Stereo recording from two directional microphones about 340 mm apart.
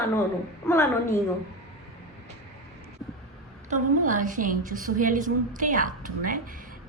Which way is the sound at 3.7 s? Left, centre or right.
Right.